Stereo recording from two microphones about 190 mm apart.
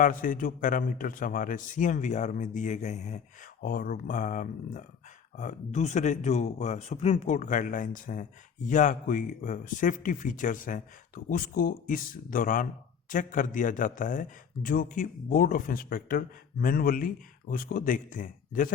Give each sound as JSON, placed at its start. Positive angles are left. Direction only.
{"t": 0.0, "sound": "speech", "side_deg": 45}
{"t": 3.6, "sound": "speech", "side_deg": 50}